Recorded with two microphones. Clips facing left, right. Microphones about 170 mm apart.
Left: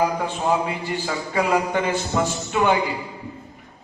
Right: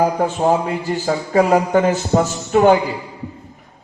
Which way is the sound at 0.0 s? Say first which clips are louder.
Right 6 dB; 45° right (ahead or behind).